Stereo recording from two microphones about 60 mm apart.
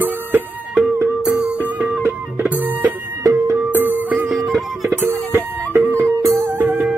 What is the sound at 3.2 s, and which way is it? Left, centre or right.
Music, right.